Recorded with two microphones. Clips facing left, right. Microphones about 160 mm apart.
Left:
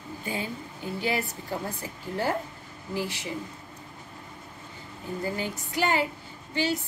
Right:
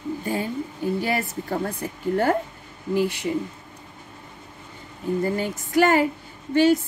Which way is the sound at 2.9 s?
60° right (ahead or behind).